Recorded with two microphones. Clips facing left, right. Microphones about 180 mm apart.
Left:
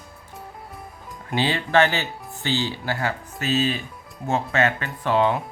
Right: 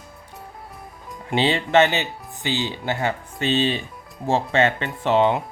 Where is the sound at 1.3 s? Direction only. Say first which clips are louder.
Right 3 dB; 25° right (ahead or behind).